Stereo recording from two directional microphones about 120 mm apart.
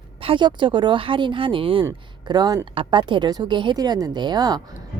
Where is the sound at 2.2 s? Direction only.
35° right (ahead or behind).